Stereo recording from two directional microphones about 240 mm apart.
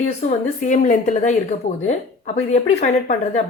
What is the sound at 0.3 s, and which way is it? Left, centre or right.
Speech, left.